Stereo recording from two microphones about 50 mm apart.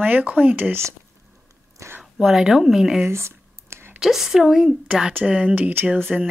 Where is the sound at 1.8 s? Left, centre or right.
Right.